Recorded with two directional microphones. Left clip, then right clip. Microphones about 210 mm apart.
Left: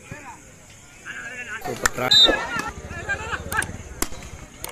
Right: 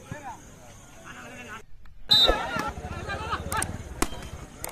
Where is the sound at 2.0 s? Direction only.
55° right (ahead or behind).